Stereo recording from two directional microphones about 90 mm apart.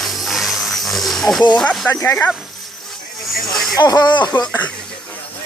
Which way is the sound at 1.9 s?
25° left (ahead or behind).